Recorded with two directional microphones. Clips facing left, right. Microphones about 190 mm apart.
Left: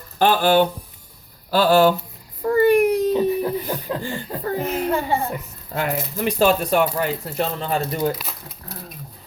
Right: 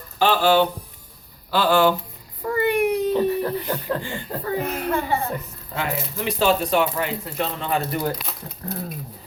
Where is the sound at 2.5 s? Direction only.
40° left (ahead or behind).